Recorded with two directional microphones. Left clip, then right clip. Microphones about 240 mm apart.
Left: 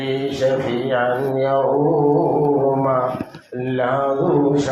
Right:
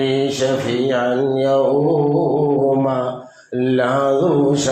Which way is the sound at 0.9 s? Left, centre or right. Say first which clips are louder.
Left 1 dB; right.